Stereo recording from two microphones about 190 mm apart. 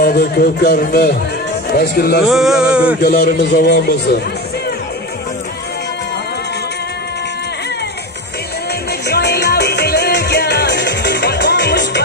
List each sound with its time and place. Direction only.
0.0 s speech: 55° left (ahead or behind)
2.2 s a sound: centre (ahead or behind)
3.0 s speech: 55° left (ahead or behind)
9.0 s music: 55° left (ahead or behind)